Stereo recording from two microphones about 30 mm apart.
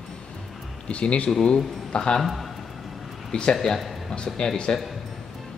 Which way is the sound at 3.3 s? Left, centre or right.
Left.